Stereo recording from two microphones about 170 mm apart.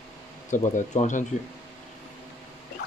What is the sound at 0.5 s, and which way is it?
Speech, 45° left (ahead or behind).